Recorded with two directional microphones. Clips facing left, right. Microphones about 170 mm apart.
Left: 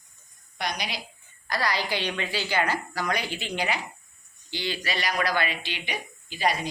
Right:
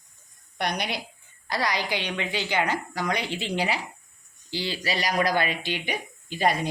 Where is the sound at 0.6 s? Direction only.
60° right (ahead or behind).